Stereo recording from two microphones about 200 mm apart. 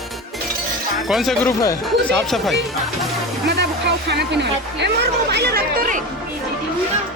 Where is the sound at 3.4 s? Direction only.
60° right (ahead or behind).